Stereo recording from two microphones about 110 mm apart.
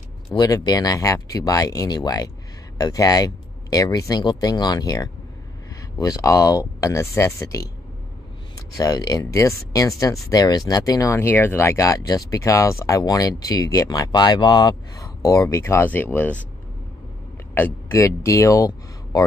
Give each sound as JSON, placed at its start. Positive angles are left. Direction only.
{"t": 0.4, "sound": "speech", "side_deg": 35}
{"t": 11.1, "sound": "speech", "side_deg": 20}
{"t": 17.6, "sound": "speech", "side_deg": 20}